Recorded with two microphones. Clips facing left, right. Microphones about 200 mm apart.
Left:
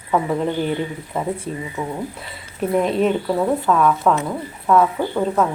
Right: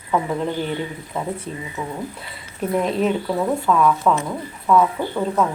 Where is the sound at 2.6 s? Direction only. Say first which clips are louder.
Left 2 dB; centre (ahead or behind).